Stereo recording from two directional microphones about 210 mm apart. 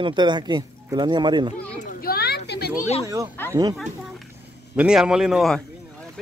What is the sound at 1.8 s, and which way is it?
Children playing, 45° left (ahead or behind).